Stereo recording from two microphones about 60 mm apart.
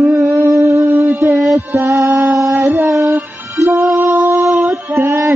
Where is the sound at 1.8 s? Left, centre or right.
Right.